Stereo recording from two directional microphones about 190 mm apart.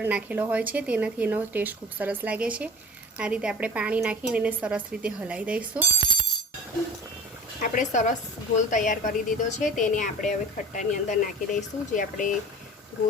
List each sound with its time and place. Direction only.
0.0 s a woman's voice: 10° right (ahead or behind)
7.6 s a woman's voice: 40° left (ahead or behind)